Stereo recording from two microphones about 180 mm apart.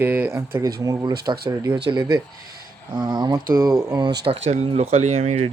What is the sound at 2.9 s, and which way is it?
Speech, 25° right (ahead or behind).